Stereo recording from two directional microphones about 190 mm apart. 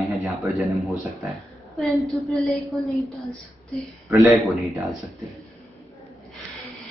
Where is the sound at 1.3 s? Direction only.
Centre (ahead or behind).